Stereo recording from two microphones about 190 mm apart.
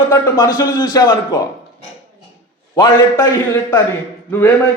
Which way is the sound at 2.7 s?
20° left (ahead or behind).